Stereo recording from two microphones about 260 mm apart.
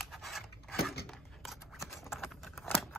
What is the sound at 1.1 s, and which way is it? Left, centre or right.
Scissors, centre.